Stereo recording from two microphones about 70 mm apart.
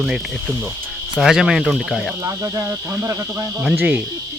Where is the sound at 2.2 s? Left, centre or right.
Right.